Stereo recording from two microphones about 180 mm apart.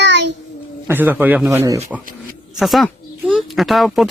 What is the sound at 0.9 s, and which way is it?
Speech, 10° right (ahead or behind).